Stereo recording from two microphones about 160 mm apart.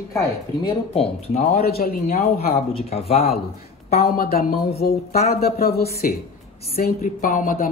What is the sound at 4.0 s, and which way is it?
Speech, 70° left (ahead or behind).